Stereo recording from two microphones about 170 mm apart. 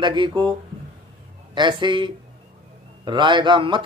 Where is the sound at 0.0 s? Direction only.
25° right (ahead or behind).